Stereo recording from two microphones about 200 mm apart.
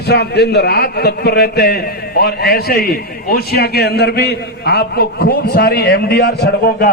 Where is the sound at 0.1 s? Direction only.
55° left (ahead or behind).